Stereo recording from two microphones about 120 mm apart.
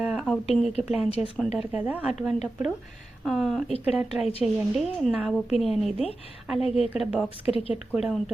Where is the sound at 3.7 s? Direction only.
60° left (ahead or behind).